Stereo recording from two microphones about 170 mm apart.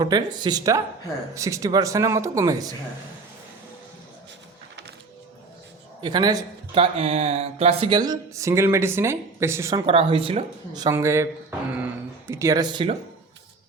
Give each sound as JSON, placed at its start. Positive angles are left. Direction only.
{"t": 0.0, "sound": "speech", "side_deg": -25}
{"t": 6.0, "sound": "a man's voice", "side_deg": -25}
{"t": 7.0, "sound": "speech", "side_deg": -35}
{"t": 9.8, "sound": "speech", "side_deg": -35}
{"t": 10.8, "sound": "speech", "side_deg": -15}
{"t": 12.3, "sound": "speech", "side_deg": -20}